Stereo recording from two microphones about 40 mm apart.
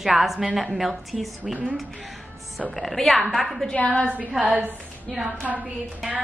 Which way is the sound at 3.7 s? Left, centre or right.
Left.